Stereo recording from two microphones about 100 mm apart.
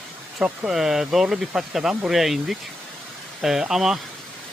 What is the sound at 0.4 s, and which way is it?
Speech, 5° right (ahead or behind).